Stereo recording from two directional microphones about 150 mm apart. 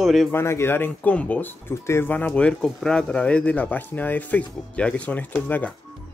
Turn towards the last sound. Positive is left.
turn(degrees=10)  # may be behind; listen again after turning